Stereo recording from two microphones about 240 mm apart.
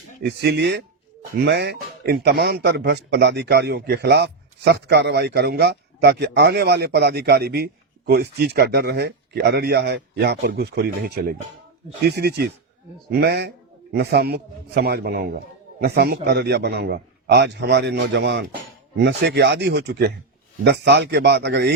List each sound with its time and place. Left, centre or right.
0.2 s speech: right